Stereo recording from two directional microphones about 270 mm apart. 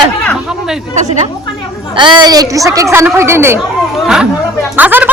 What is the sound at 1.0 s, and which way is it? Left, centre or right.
A woman's voice, right.